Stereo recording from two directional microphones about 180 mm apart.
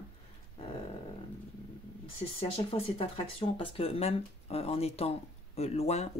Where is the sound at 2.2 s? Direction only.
30° left (ahead or behind).